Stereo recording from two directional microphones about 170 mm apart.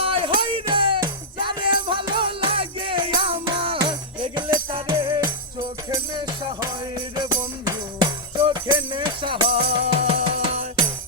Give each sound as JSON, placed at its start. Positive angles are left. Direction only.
{"t": 0.0, "sound": "music", "side_deg": -30}